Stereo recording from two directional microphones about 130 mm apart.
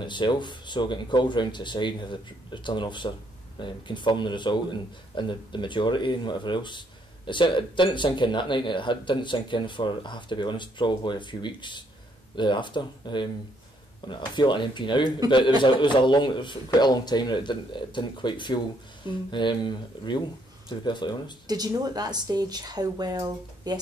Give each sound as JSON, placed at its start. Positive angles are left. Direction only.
{"t": 0.0, "sound": "speech", "side_deg": 35}
{"t": 21.5, "sound": "speech", "side_deg": -30}